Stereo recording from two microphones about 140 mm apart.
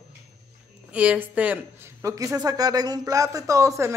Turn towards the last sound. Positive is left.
turn(degrees=-20)  # may be behind; listen again after turning